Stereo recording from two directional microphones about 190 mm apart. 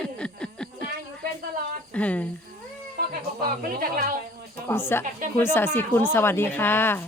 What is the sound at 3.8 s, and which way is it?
Speech, 45° right (ahead or behind).